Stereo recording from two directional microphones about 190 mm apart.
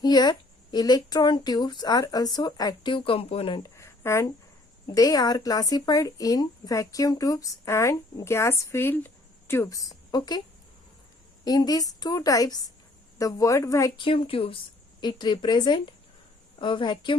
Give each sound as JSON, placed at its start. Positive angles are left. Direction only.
{"t": 0.0, "sound": "speech", "side_deg": 20}
{"t": 11.4, "sound": "a woman's voice", "side_deg": 20}